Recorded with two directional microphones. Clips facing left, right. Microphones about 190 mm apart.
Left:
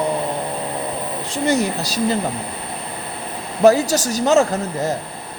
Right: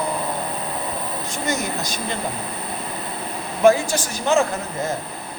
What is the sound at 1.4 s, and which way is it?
Speech, 35° left (ahead or behind).